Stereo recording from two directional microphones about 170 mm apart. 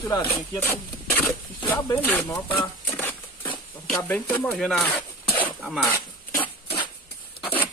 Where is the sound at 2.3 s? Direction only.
20° left (ahead or behind).